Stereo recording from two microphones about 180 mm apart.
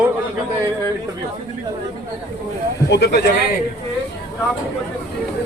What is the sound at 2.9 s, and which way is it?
Speech, 70° left (ahead or behind).